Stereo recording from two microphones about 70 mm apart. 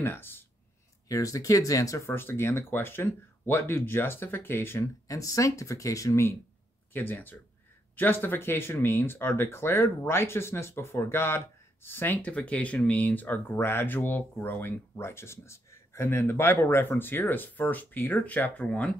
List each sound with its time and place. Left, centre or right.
0.0 s speech: left
1.0 s speech: left
2.0 s speech: left
5.0 s speech: left
6.9 s speech: left
13.6 s speech: left
15.0 s speech: left; by 18.9 s centre